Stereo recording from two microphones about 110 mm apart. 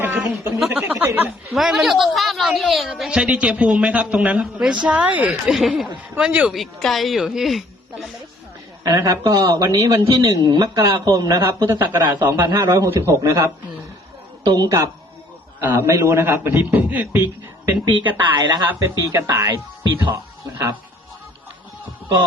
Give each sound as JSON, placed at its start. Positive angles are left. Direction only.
{"t": 0.0, "sound": "speech", "side_deg": -20}
{"t": 0.6, "sound": "a woman's voice", "side_deg": -10}
{"t": 1.5, "sound": "a woman's voice", "side_deg": 0}
{"t": 5.5, "sound": "speech", "side_deg": 0}
{"t": 8.8, "sound": "a man's voice", "side_deg": -30}
{"t": 18.2, "sound": "a man's voice", "side_deg": -40}